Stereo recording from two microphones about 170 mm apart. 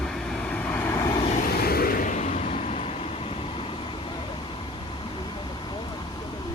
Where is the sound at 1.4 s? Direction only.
60° left (ahead or behind); by 3.6 s 35° left (ahead or behind).